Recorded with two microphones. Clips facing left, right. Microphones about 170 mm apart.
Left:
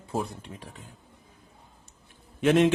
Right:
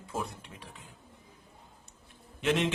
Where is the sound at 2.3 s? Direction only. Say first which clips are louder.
Left 8 dB; 50° left (ahead or behind).